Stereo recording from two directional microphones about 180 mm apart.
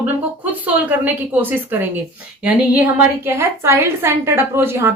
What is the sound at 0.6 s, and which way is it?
A woman's voice, 10° right (ahead or behind).